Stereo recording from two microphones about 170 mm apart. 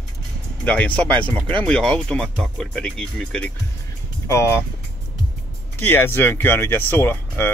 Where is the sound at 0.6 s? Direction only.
5° left (ahead or behind).